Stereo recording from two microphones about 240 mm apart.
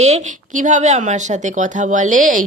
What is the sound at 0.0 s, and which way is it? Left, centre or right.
Speech, right.